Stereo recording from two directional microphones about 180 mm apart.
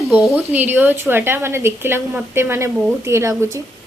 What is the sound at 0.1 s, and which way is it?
A woman's voice, centre (ahead or behind).